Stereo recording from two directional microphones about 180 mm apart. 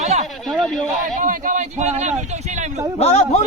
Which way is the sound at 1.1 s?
50° right (ahead or behind).